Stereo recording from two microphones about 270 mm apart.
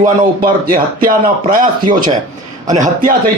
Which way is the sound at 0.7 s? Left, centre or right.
Right.